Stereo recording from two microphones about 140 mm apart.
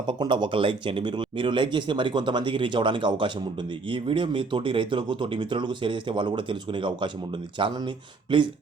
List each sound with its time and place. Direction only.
0.1 s speech: 30° right (ahead or behind)